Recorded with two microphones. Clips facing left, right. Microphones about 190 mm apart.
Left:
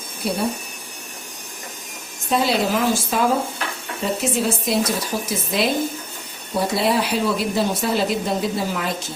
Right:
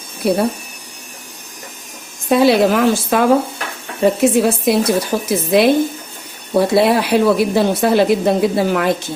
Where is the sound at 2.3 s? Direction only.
65° right (ahead or behind).